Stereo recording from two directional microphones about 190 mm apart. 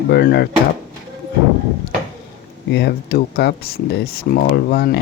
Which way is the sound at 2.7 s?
60° left (ahead or behind).